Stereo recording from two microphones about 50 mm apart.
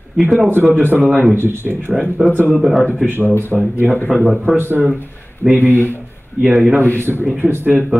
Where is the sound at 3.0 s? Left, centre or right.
Right.